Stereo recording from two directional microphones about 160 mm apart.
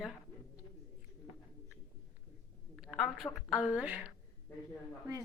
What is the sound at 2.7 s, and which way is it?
A woman's voice, centre (ahead or behind).